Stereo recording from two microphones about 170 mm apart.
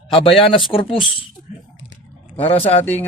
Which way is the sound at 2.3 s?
35° left (ahead or behind).